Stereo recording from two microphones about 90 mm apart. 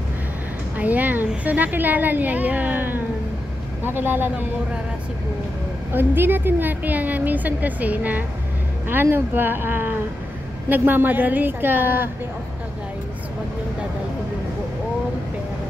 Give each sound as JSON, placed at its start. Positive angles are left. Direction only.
{"t": 0.7, "sound": "a woman's voice", "side_deg": -15}
{"t": 5.9, "sound": "a woman's voice", "side_deg": -25}